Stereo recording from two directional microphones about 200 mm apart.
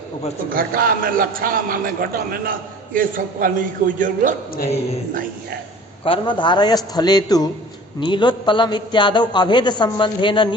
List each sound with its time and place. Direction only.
0.5 s a man's voice: 45° right (ahead or behind)
6.1 s a man's voice: 25° left (ahead or behind)